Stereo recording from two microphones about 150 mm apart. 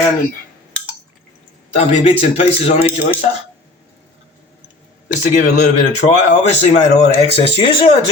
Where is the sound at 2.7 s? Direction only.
10° right (ahead or behind).